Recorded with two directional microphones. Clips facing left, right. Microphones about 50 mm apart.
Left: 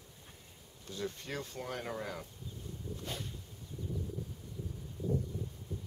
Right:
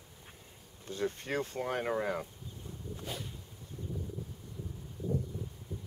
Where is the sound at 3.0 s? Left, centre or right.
Centre.